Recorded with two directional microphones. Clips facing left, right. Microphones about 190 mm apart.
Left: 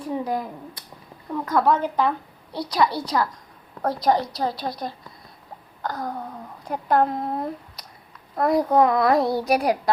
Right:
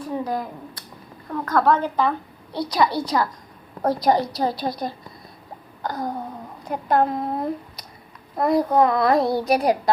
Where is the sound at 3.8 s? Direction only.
10° right (ahead or behind).